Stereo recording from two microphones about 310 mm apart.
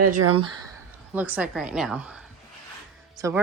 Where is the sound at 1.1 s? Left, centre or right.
Centre.